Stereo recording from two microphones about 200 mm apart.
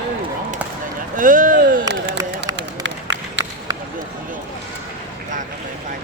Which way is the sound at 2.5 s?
65° right (ahead or behind).